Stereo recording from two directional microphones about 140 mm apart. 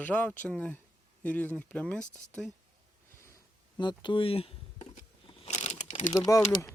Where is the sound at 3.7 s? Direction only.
35° left (ahead or behind); by 5.9 s 55° left (ahead or behind).